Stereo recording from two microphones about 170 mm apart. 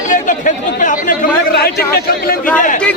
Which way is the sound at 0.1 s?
50° left (ahead or behind).